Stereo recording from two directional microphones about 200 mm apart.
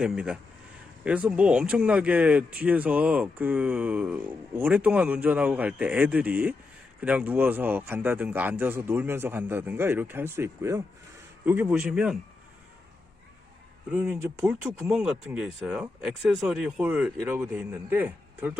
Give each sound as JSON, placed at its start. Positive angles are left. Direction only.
{"t": 0.0, "sound": "speech", "side_deg": -5}
{"t": 13.9, "sound": "speech", "side_deg": -10}